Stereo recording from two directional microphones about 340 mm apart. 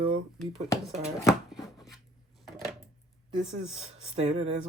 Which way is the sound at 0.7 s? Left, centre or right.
Centre.